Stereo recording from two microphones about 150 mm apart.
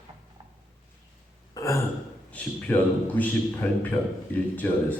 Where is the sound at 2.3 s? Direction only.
10° left (ahead or behind).